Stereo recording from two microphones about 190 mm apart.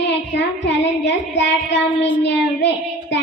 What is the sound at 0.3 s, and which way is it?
Child singing, 65° left (ahead or behind).